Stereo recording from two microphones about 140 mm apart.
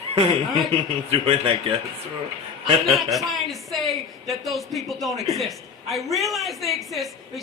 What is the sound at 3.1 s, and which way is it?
Speech, centre (ahead or behind).